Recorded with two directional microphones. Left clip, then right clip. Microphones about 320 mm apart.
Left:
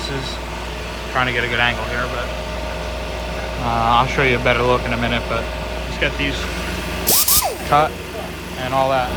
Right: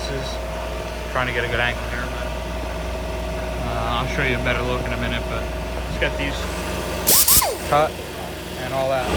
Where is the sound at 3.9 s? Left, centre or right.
Centre.